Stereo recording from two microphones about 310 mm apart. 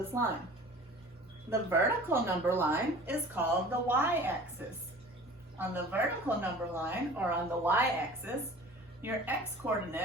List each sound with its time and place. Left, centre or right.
0.1 s a woman's voice: centre
1.5 s a woman's voice: centre